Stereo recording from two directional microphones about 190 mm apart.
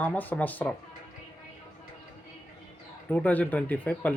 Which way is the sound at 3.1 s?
10° left (ahead or behind).